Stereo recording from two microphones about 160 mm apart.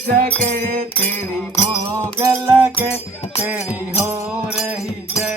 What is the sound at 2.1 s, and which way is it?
Music, 20° right (ahead or behind).